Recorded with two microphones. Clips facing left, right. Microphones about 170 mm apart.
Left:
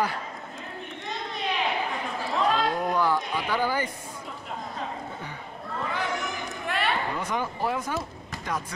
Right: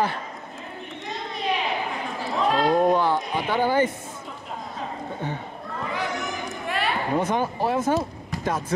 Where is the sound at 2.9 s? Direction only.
20° right (ahead or behind).